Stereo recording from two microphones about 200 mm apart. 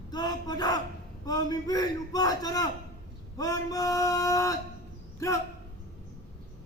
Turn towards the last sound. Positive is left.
turn(degrees=15)  # may be behind; listen again after turning